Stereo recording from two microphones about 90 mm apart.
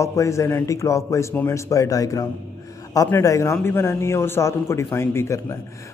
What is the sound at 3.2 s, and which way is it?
Speech, 35° left (ahead or behind).